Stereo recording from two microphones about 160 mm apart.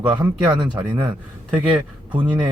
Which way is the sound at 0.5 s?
30° right (ahead or behind).